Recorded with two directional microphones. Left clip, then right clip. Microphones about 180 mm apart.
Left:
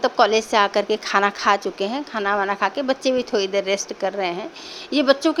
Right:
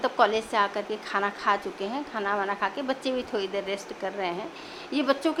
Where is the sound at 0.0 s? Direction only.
30° left (ahead or behind).